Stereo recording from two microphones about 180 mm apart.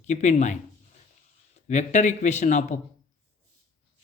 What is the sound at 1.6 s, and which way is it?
Speech, 40° left (ahead or behind).